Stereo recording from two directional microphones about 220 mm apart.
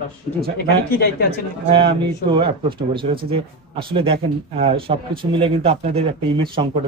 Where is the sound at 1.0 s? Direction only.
45° left (ahead or behind).